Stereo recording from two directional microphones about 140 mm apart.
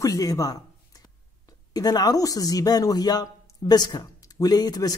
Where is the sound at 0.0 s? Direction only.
25° left (ahead or behind).